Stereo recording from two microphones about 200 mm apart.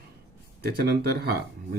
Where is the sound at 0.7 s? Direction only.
50° right (ahead or behind).